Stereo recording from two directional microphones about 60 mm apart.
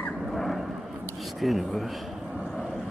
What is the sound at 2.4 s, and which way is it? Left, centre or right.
Vehicle, centre.